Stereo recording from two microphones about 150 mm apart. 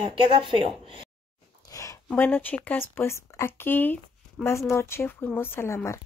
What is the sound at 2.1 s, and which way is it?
Speech, 10° left (ahead or behind).